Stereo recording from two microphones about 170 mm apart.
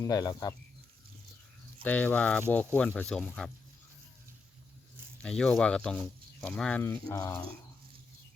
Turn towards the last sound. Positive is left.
turn(degrees=20)  # may be behind; listen again after turning